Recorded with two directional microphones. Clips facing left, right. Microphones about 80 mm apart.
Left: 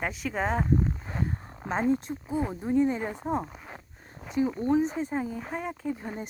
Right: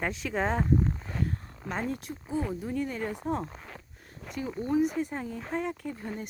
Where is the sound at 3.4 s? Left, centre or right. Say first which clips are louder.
Right 1 dB; centre.